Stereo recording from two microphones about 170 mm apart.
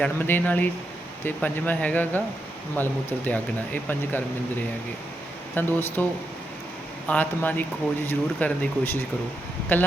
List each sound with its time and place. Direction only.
0.0 s speech: 10° left (ahead or behind)
5.5 s speech: 10° left (ahead or behind)
7.1 s speech: 10° left (ahead or behind)